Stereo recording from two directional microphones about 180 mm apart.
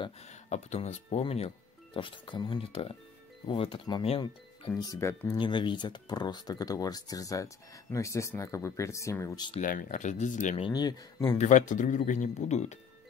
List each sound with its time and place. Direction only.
0.3 s speech: 40° left (ahead or behind)
4.7 s speech: 20° left (ahead or behind)
5.4 s speech: 25° left (ahead or behind)
9.6 s speech: 45° left (ahead or behind)
10.6 s speech: 20° left (ahead or behind)
11.3 s speech: 45° left (ahead or behind)